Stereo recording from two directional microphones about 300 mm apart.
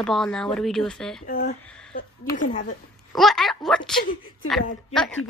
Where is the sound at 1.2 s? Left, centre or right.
Left.